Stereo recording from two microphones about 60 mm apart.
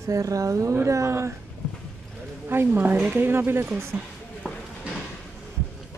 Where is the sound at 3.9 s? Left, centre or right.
Right.